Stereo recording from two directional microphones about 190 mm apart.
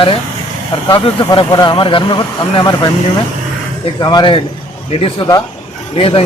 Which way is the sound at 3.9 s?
20° left (ahead or behind).